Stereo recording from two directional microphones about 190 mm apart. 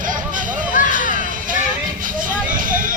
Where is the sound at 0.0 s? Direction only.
45° right (ahead or behind).